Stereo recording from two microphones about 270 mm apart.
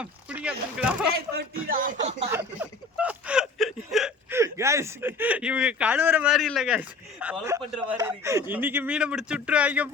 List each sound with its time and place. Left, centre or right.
0.0 s speech: centre
1.1 s speech: right
2.3 s speech: centre